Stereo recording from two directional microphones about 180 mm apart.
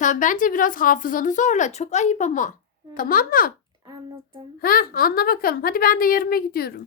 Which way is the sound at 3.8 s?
20° right (ahead or behind).